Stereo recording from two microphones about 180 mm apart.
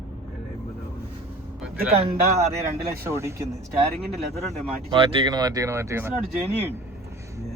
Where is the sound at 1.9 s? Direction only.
35° right (ahead or behind).